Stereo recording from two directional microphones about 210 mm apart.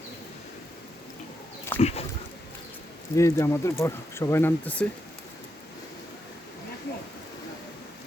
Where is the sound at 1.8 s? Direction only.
30° left (ahead or behind).